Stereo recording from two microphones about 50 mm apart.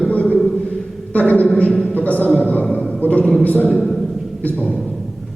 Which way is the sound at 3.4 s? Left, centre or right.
Left.